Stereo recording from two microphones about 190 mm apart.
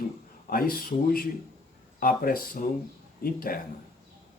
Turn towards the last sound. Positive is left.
turn(degrees=50)  # may be behind; listen again after turning